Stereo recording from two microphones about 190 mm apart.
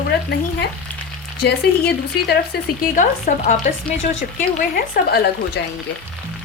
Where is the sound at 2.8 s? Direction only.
45° left (ahead or behind).